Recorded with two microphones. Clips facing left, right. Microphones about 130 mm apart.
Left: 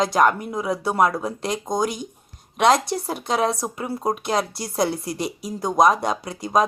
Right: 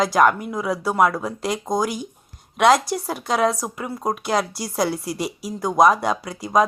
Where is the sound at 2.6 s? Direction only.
25° left (ahead or behind).